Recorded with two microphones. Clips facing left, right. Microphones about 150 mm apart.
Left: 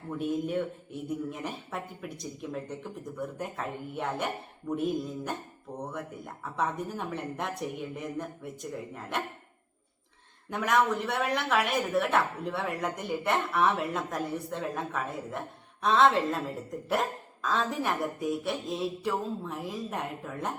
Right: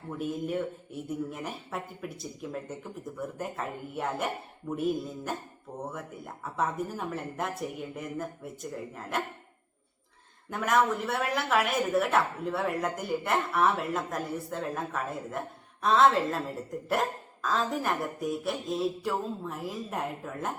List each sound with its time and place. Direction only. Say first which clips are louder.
0.2 s speech: left 1 dB; centre (ahead or behind)
10.5 s speech: even; centre (ahead or behind)